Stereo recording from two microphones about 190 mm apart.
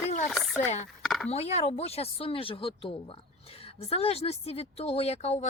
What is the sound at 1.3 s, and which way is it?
Speech, 35° left (ahead or behind).